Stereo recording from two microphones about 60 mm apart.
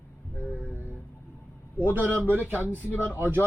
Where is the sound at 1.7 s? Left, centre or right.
Right.